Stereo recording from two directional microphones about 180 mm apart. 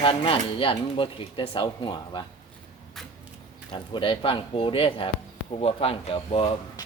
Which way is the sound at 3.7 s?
25° left (ahead or behind).